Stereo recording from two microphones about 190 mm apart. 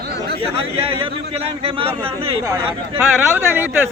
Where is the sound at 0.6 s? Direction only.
30° right (ahead or behind).